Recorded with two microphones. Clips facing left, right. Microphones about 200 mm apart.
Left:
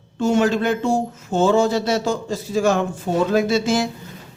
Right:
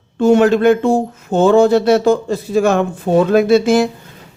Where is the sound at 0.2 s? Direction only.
60° right (ahead or behind).